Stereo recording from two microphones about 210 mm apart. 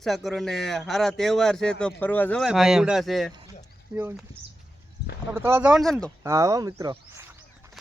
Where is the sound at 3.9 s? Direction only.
10° right (ahead or behind).